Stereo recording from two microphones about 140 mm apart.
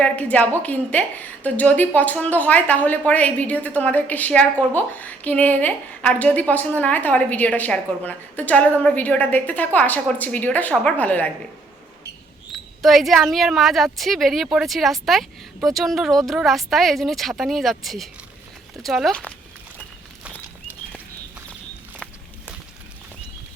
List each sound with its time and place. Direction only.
0.0 s a woman's voice: 10° left (ahead or behind)
12.5 s a woman's voice: centre (ahead or behind)